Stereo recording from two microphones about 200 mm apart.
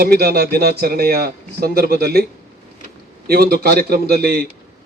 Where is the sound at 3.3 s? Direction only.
50° right (ahead or behind).